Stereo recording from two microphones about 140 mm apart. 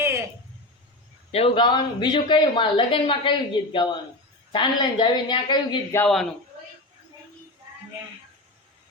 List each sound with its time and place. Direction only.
0.0 s a sound: 20° right (ahead or behind)
1.3 s speech: 45° left (ahead or behind)
5.9 s a man's voice: 20° left (ahead or behind)